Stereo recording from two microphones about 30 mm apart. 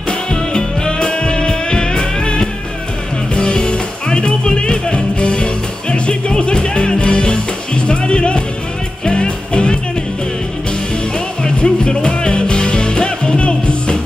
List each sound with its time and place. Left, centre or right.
0.3 s music: left
11.4 s music: left